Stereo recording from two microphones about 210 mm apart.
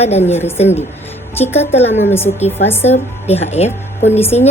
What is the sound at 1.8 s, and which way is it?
Speech, 30° left (ahead or behind).